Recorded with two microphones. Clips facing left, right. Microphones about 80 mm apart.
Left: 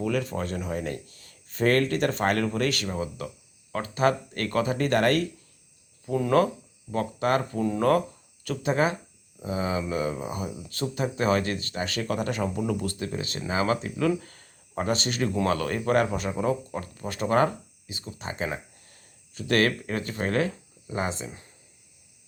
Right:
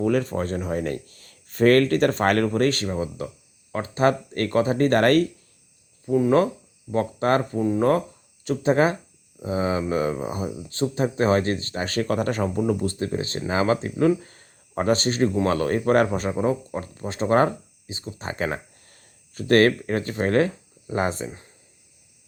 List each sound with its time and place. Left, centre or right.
0.0 s speech: right
2.5 s speech: right
6.1 s speech: centre
6.9 s speech: right
7.5 s speech: right
14.8 s speech: right
18.2 s speech: right